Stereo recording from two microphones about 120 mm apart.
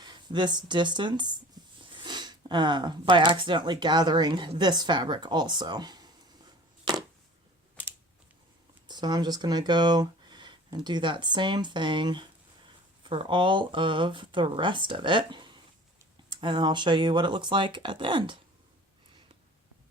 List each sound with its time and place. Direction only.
0.0 s speech: 40° right (ahead or behind)
8.9 s speech: 35° right (ahead or behind)